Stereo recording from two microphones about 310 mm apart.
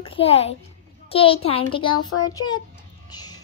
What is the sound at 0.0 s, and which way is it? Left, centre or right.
A child's voice, centre.